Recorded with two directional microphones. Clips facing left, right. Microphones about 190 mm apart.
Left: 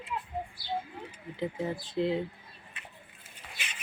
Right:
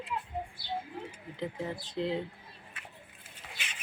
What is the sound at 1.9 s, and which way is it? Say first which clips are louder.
Speech: left 3 dB; 5° left (ahead or behind).